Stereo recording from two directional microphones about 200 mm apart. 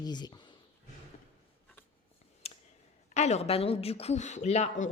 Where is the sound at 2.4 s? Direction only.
30° left (ahead or behind).